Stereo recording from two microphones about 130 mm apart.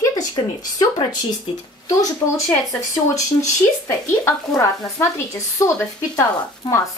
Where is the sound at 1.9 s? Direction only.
25° left (ahead or behind).